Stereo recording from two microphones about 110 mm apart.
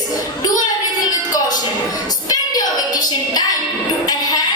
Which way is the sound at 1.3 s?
35° left (ahead or behind).